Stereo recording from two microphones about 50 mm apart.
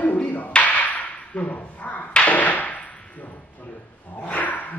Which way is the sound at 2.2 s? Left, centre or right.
Left.